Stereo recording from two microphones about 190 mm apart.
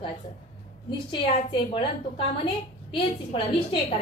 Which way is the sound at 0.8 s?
25° left (ahead or behind).